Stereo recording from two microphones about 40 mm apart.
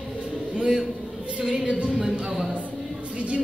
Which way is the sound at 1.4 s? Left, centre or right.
Centre.